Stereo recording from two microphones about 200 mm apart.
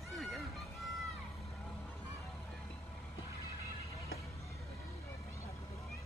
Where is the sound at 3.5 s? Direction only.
15° left (ahead or behind).